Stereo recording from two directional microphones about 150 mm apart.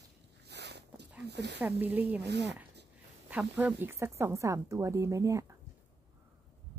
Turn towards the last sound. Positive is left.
turn(degrees=-20)  # may be behind; listen again after turning